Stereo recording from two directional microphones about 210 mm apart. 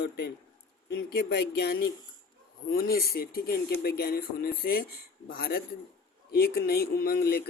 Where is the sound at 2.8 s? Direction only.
45° left (ahead or behind).